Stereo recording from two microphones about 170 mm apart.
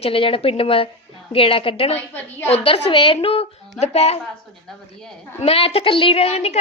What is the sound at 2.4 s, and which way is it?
A woman's voice, 35° left (ahead or behind).